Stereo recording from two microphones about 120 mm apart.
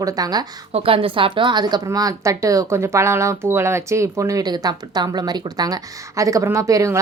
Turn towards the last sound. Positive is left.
turn(degrees=-25)  # may be behind; listen again after turning